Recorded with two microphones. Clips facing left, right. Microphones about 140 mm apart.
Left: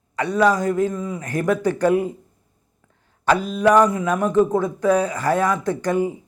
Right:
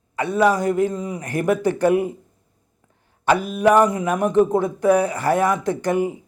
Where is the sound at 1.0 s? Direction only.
15° right (ahead or behind).